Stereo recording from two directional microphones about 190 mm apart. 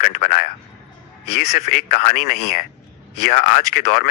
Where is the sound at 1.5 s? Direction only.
40° left (ahead or behind).